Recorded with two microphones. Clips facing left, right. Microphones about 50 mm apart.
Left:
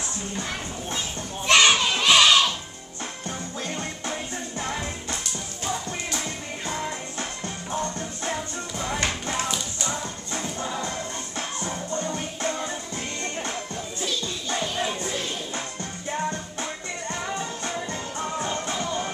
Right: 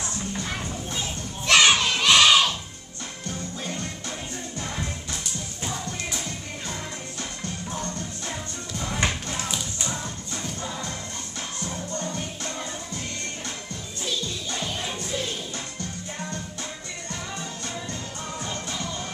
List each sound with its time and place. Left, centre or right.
1.5 s children playing: centre
1.9 s crowd: centre
2.2 s music: centre
4.6 s music: left
7.2 s music: left
8.7 s music: centre
10.3 s music: left
17.1 s music: left